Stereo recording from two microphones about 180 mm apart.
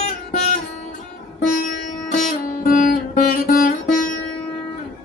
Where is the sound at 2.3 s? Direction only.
50° left (ahead or behind).